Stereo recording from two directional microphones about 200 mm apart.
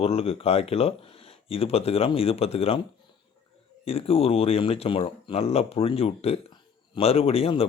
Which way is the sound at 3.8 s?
30° left (ahead or behind).